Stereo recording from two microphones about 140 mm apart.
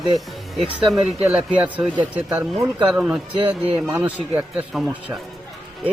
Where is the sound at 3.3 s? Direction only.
35° right (ahead or behind).